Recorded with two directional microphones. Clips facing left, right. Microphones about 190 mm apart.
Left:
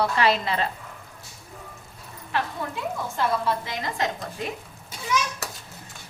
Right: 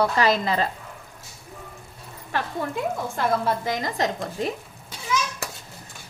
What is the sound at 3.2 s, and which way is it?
Speech, 45° right (ahead or behind).